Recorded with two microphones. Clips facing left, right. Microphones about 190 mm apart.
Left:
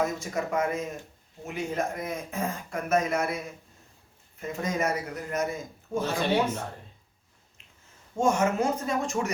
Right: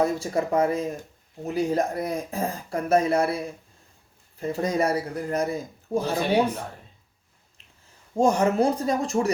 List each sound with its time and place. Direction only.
0.0 s a man's voice: 35° right (ahead or behind)
8.1 s a man's voice: 35° right (ahead or behind)